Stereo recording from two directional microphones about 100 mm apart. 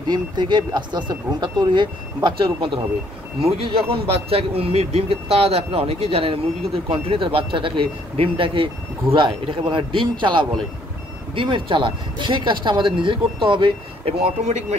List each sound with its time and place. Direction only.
0.1 s speech: 50° right (ahead or behind)
2.2 s speech: 60° right (ahead or behind)
3.3 s speech: 85° right
6.9 s speech: 65° right (ahead or behind)
14.0 s speech: 90° right